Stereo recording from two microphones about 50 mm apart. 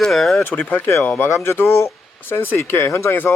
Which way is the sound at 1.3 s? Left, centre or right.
Left.